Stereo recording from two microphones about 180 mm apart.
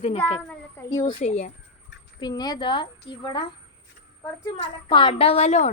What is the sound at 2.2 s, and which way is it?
A woman's voice, 20° left (ahead or behind).